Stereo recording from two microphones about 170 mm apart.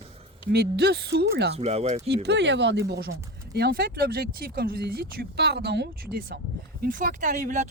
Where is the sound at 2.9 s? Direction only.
65° right (ahead or behind).